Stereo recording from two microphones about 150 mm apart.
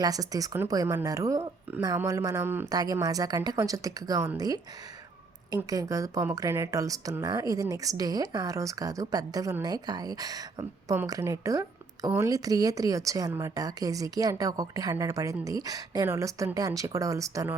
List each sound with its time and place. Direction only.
0.0 s speech: 25° right (ahead or behind)
2.6 s speech: 25° right (ahead or behind)